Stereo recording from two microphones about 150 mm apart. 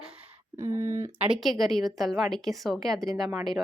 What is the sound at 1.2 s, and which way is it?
A woman's voice, 5° right (ahead or behind).